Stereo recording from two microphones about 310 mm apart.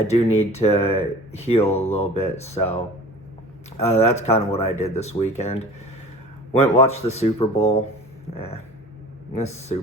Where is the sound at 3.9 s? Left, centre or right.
Centre.